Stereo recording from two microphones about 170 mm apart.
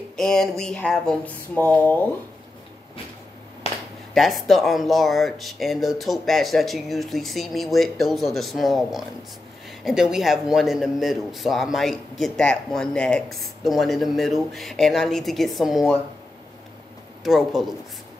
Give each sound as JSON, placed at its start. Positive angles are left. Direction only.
{"t": 0.1, "sound": "a man's voice", "side_deg": 5}
{"t": 3.6, "sound": "a sound", "side_deg": 35}
{"t": 4.1, "sound": "a man's voice", "side_deg": 0}
{"t": 17.2, "sound": "a man's voice", "side_deg": 0}